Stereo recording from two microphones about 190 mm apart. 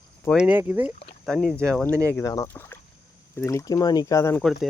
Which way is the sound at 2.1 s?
15° left (ahead or behind).